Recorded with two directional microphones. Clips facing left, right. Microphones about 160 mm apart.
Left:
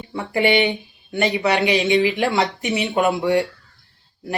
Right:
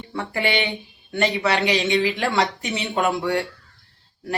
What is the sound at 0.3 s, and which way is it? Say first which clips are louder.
Speech: left 7 dB; 20° left (ahead or behind).